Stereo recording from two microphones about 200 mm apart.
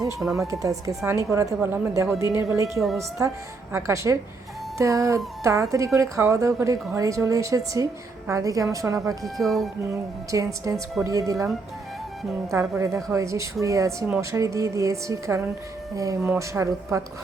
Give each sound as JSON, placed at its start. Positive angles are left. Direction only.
{"t": 0.3, "sound": "speech", "side_deg": -15}
{"t": 9.2, "sound": "speech", "side_deg": 0}
{"t": 9.9, "sound": "speech", "side_deg": -15}
{"t": 12.5, "sound": "speech", "side_deg": -15}